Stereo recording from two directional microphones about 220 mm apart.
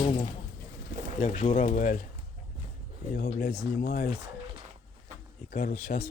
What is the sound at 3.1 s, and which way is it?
Speech, 45° left (ahead or behind).